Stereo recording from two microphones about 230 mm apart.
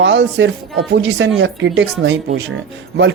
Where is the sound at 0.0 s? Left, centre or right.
Right.